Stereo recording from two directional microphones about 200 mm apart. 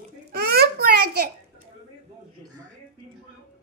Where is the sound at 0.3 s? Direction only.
50° right (ahead or behind).